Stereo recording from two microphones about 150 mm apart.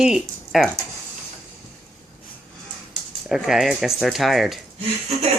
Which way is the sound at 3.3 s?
5° right (ahead or behind).